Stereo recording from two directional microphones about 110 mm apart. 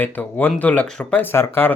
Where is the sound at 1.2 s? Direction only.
20° left (ahead or behind).